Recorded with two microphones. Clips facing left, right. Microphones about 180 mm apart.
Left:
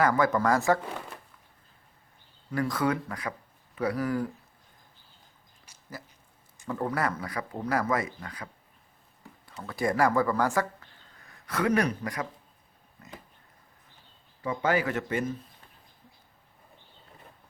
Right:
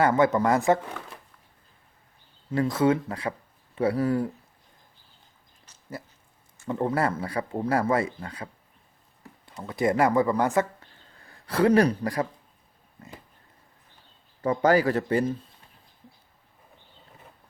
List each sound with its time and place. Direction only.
0.0 s speech: 25° right (ahead or behind)
2.5 s speech: 25° right (ahead or behind)
5.7 s a sound: 10° left (ahead or behind)
6.7 s speech: 25° right (ahead or behind)
9.5 s speech: 20° right (ahead or behind)
14.4 s speech: 40° right (ahead or behind)